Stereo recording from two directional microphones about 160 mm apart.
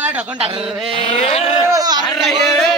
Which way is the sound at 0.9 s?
35° left (ahead or behind).